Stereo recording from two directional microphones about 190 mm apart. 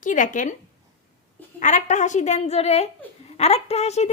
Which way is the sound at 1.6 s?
40° left (ahead or behind).